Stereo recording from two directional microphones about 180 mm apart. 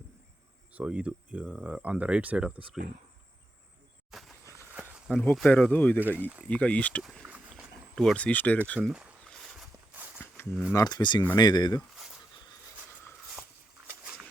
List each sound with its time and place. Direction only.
0.7 s speech: 5° right (ahead or behind)
4.1 s a sound: centre (ahead or behind)
5.1 s speech: 5° left (ahead or behind)
6.0 s speech: 10° right (ahead or behind)
6.5 s speech: 5° left (ahead or behind)
7.2 s a sound: 10° right (ahead or behind)
7.9 s speech: 5° left (ahead or behind)
8.6 s walk: 5° left (ahead or behind)
10.7 s speech: 20° left (ahead or behind)